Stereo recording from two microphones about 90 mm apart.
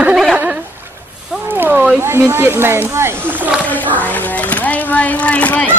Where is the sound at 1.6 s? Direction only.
20° right (ahead or behind).